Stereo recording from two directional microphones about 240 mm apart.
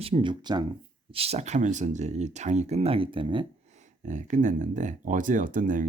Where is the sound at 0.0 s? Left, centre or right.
Right.